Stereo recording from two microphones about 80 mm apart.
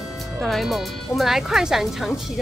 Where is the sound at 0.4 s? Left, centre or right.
Centre.